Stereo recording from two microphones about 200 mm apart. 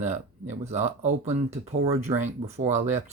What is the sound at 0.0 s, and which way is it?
Speech, 35° right (ahead or behind).